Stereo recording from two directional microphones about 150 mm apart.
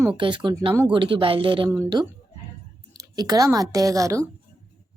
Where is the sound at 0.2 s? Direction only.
30° right (ahead or behind).